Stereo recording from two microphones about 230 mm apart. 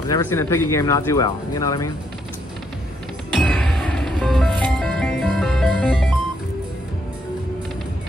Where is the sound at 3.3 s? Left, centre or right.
Centre.